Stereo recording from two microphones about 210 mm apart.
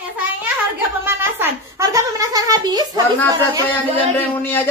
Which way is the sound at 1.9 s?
15° right (ahead or behind).